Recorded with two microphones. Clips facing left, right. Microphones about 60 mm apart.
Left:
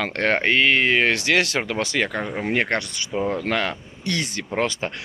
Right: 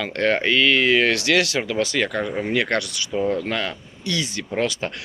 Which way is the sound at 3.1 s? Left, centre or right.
Centre.